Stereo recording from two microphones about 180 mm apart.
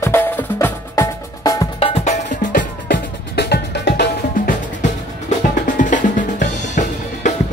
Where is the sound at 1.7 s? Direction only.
35° left (ahead or behind).